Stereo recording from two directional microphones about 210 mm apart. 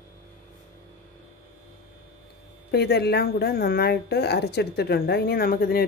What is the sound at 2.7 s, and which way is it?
Speech, 50° left (ahead or behind).